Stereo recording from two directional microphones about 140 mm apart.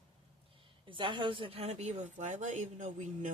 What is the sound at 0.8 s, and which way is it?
A woman's voice, 35° right (ahead or behind).